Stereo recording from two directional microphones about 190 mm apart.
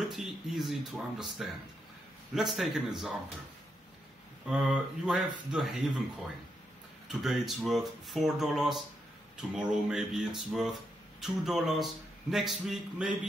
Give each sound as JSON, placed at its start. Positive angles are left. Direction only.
{"t": 0.1, "sound": "speech", "side_deg": 0}
{"t": 4.5, "sound": "speech", "side_deg": -5}
{"t": 7.1, "sound": "speech", "side_deg": 0}